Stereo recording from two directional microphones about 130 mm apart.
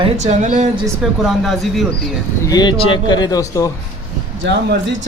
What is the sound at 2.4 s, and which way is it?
Speech, 30° left (ahead or behind).